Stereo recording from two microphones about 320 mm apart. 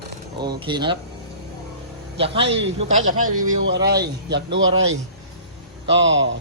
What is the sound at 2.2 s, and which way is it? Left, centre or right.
A man's voice, centre.